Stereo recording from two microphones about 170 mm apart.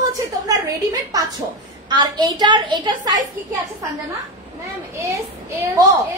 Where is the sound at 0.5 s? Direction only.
20° right (ahead or behind).